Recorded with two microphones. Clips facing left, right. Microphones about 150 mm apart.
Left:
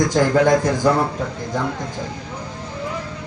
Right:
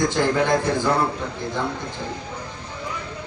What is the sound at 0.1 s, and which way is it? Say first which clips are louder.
Speech: left 5 dB; 40° left (ahead or behind).